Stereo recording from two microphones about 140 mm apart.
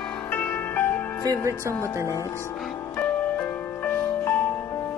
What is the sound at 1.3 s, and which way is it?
Speech, 20° right (ahead or behind).